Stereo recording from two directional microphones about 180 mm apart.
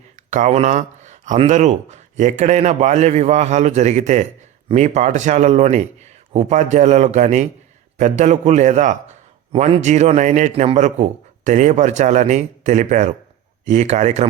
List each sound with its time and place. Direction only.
0.3 s a man's voice: 45° right (ahead or behind)
9.5 s a man's voice: 30° right (ahead or behind)